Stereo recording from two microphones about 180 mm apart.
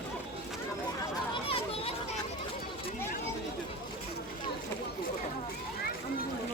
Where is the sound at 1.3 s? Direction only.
30° left (ahead or behind).